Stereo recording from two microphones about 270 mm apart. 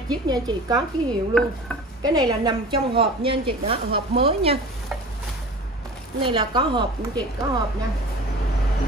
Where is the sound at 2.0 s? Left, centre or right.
Centre.